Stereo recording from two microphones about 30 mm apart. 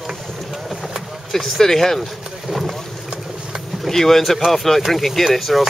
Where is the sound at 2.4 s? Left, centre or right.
Centre.